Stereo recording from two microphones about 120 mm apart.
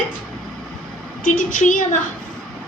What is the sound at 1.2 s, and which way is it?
Speech, 90° left.